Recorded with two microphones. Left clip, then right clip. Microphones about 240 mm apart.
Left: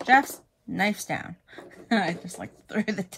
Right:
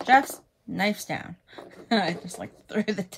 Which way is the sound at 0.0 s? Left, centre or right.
Centre.